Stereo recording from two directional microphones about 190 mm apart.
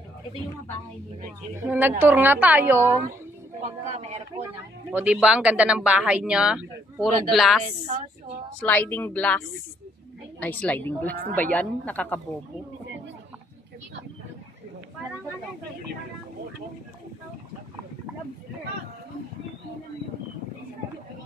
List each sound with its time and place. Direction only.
1.6 s a woman's voice: 10° right (ahead or behind)
3.6 s a woman's voice: 35° right (ahead or behind)
4.9 s speech: 5° right (ahead or behind)
7.6 s a woman's voice: 35° right (ahead or behind)
8.5 s a woman's voice: 10° left (ahead or behind)
10.4 s a woman's voice: 10° left (ahead or behind)